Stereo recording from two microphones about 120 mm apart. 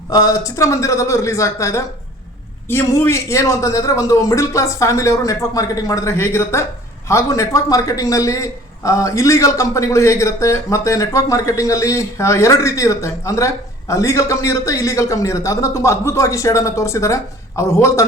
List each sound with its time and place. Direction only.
0.1 s a man's voice: 30° left (ahead or behind)